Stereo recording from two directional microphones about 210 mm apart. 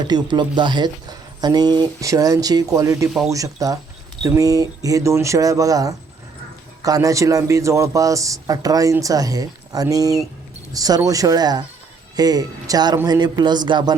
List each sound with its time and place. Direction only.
0.1 s a man's voice: 20° right (ahead or behind)